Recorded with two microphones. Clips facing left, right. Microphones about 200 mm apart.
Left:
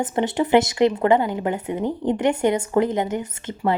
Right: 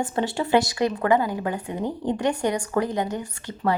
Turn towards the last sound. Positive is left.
turn(degrees=20)  # may be behind; listen again after turning